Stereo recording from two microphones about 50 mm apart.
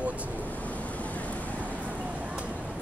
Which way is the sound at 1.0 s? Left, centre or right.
Left.